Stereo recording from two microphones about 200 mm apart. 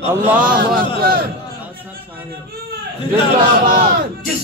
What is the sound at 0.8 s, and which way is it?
Speech, 45° right (ahead or behind).